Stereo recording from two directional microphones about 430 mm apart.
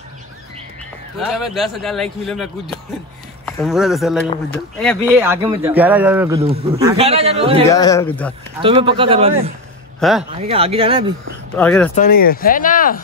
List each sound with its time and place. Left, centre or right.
1.1 s speech: centre
7.7 s speech: centre
8.6 s speech: centre
9.9 s speech: centre
10.3 s speech: centre
11.5 s speech: centre
11.9 s speech: centre